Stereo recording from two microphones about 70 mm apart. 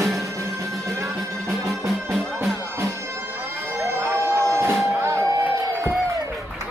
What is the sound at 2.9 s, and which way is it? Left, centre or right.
Music, right.